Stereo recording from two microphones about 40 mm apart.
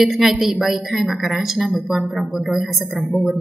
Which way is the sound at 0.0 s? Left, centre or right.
Centre.